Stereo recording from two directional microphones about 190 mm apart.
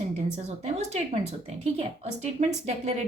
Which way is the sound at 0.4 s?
35° right (ahead or behind).